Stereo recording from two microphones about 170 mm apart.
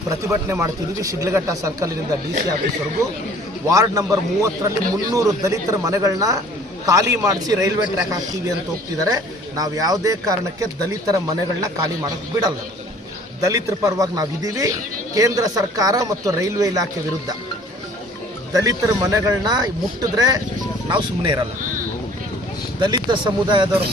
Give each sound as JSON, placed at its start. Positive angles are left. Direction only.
{"t": 0.1, "sound": "speech", "side_deg": -15}
{"t": 3.7, "sound": "speech", "side_deg": -20}
{"t": 18.5, "sound": "speech", "side_deg": -20}
{"t": 22.8, "sound": "speech", "side_deg": -25}